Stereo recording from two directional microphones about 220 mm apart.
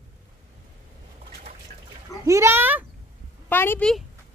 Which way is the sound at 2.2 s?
15° right (ahead or behind).